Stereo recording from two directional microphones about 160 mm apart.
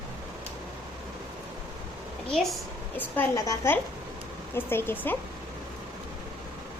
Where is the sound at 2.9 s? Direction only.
15° left (ahead or behind).